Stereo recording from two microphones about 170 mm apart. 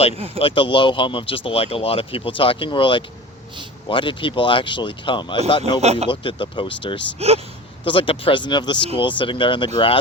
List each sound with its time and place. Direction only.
0.3 s speech: 30° left (ahead or behind)
5.8 s speech: 40° right (ahead or behind)
6.1 s speech: 30° left (ahead or behind)
7.2 s speech: 35° right (ahead or behind)
7.9 s speech: 30° left (ahead or behind)